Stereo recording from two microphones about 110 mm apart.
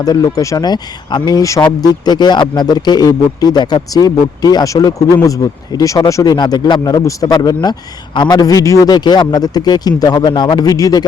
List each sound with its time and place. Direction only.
0.0 s speech: 35° left (ahead or behind)